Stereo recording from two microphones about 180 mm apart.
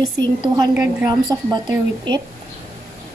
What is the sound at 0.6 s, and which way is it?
A woman's voice, 20° right (ahead or behind).